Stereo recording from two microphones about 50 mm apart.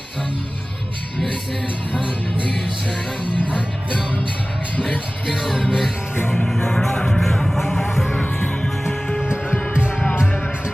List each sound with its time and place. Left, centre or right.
1.9 s music: right
5.5 s music: centre
6.4 s music: centre
8.9 s music: centre
9.2 s music: centre